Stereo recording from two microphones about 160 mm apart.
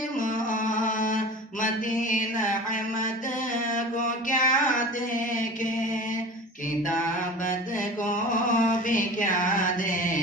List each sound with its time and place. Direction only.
0.2 s music: 55° left (ahead or behind)
4.3 s mantra: 55° left (ahead or behind)
8.0 s mantra: 55° left (ahead or behind)